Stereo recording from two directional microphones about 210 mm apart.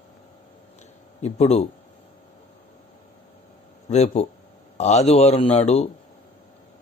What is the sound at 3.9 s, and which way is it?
A man's voice, 30° left (ahead or behind).